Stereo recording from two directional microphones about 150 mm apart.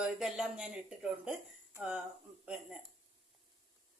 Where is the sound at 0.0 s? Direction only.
5° right (ahead or behind).